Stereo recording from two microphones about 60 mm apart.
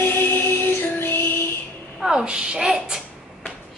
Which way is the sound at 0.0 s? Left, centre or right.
Left.